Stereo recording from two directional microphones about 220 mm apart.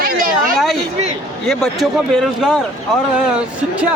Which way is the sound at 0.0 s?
40° right (ahead or behind).